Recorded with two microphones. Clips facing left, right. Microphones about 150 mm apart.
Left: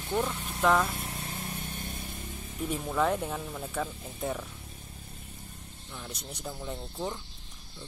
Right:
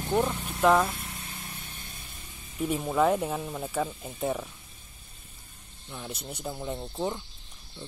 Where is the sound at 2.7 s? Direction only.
5° right (ahead or behind).